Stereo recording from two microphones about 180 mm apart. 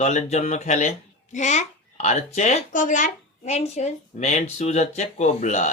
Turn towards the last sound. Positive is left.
turn(degrees=40)  # may be behind; listen again after turning